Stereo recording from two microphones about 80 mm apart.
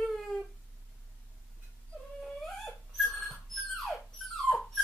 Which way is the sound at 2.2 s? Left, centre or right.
Centre.